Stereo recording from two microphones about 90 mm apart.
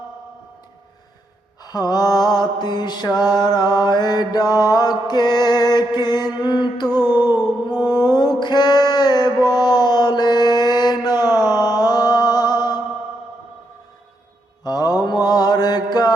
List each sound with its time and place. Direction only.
1.6 s mantra: 45° left (ahead or behind)
6.4 s a sound: 55° left (ahead or behind)
7.0 s music: 50° left (ahead or behind)
7.8 s music: 25° right (ahead or behind)
8.1 s a sound: 50° left (ahead or behind)
9.4 s mantra: 50° left (ahead or behind)
14.6 s mantra: 45° left (ahead or behind)